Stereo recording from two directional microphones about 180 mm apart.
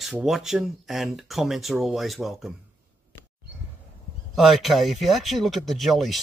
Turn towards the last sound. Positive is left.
turn(degrees=0)  # may be behind; listen again after turning